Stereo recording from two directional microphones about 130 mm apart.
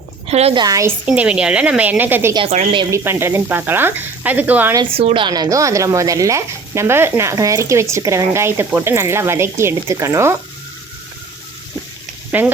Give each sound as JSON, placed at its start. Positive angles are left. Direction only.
{"t": 0.3, "sound": "a woman's voice", "side_deg": -50}
{"t": 0.5, "sound": "speech", "side_deg": -30}
{"t": 1.0, "sound": "speech", "side_deg": -10}
{"t": 4.9, "sound": "speech", "side_deg": -45}
{"t": 12.3, "sound": "speech", "side_deg": -10}